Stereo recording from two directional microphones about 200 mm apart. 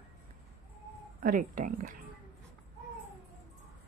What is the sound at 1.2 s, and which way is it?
Speech, 45° right (ahead or behind).